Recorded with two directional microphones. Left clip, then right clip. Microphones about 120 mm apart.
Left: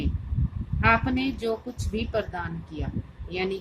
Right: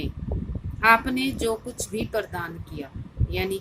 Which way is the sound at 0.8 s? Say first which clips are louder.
Right 4 dB; 40° right (ahead or behind).